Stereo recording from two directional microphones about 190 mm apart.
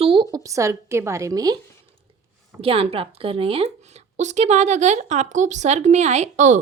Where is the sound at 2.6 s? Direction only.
30° right (ahead or behind).